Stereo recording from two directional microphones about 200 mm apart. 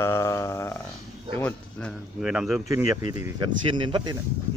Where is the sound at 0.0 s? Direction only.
15° left (ahead or behind); by 2.6 s 5° right (ahead or behind).